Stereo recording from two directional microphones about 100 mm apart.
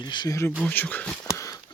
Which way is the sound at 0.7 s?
15° left (ahead or behind).